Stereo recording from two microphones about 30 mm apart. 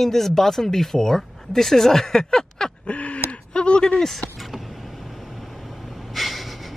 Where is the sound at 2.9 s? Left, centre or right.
Left.